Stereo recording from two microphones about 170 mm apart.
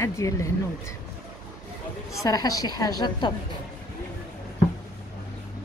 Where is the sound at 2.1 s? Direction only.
20° left (ahead or behind).